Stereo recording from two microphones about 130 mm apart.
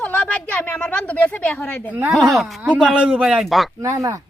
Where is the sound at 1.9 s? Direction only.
15° right (ahead or behind).